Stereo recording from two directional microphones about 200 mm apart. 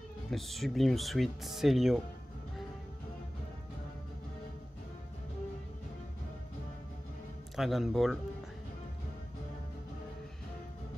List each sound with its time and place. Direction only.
0.3 s speech: centre (ahead or behind)
7.5 s speech: centre (ahead or behind)